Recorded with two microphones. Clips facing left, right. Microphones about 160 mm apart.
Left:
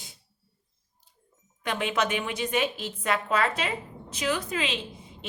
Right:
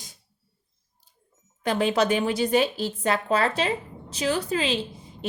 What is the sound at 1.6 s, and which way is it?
A woman's voice, 35° right (ahead or behind).